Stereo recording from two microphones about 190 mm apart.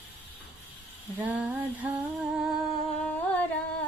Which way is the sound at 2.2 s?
Centre (ahead or behind).